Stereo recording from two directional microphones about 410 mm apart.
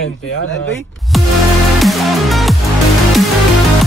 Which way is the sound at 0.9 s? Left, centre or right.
Centre.